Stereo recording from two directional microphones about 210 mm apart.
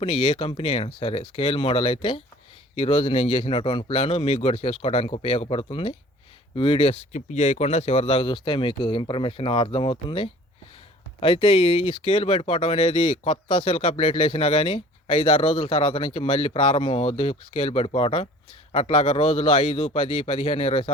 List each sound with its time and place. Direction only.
0.0 s speech: 25° left (ahead or behind)